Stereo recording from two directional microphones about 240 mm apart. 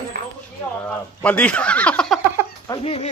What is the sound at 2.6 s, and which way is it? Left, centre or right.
Speech, left.